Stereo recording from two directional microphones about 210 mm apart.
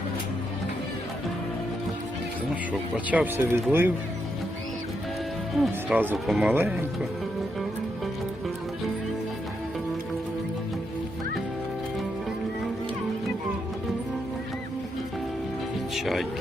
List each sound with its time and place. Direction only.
3.1 s speech: 10° right (ahead or behind)
5.5 s speech: 5° right (ahead or behind)
16.0 s music: centre (ahead or behind)